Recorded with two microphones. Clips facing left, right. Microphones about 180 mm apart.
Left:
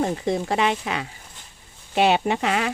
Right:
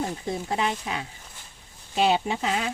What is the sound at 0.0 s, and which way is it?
Speech, 80° left.